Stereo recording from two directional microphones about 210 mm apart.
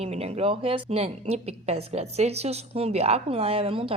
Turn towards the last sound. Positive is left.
turn(degrees=-25)  # may be behind; listen again after turning